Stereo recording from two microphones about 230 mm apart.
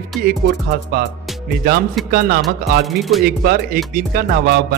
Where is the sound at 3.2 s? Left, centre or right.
Right.